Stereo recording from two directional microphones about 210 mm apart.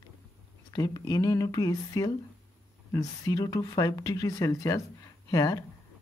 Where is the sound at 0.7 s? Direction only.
20° left (ahead or behind).